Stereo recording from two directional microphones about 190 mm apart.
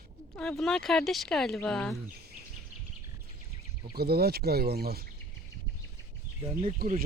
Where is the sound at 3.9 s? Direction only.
55° right (ahead or behind).